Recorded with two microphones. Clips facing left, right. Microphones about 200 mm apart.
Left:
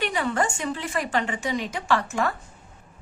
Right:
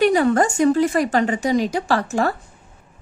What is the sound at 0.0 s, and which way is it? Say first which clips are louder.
A woman's voice: right 9 dB; 40° right (ahead or behind).